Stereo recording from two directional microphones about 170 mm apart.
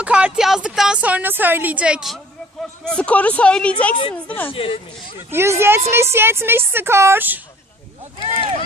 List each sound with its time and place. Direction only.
0.0 s a woman's voice: 5° right (ahead or behind)
2.8 s speech: 5° left (ahead or behind)
4.5 s speech: 30° left (ahead or behind)
5.3 s a woman's voice: 15° right (ahead or behind)
8.4 s speech: 35° right (ahead or behind)